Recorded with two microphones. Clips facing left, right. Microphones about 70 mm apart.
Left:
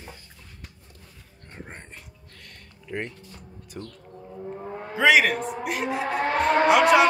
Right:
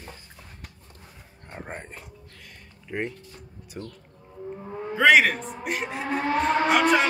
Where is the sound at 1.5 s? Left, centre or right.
Centre.